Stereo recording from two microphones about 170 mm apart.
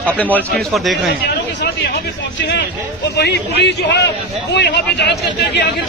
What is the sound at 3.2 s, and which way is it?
A man's voice, 80° left.